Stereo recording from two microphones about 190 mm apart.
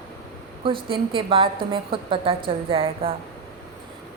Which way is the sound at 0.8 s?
25° right (ahead or behind).